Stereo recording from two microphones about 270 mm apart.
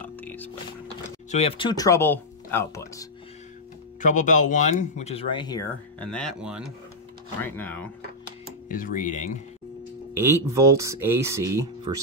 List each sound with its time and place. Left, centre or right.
0.0 s music: centre
1.3 s speech: left
4.0 s speech: left; by 7.9 s centre
8.6 s speech: left
10.1 s speech: centre